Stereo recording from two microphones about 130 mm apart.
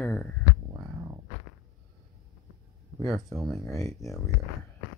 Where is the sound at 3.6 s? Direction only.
25° left (ahead or behind).